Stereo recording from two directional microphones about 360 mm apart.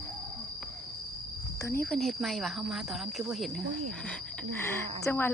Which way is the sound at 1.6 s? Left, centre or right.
Centre.